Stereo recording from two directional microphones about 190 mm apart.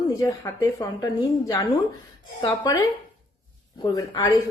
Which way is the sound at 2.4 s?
20° left (ahead or behind).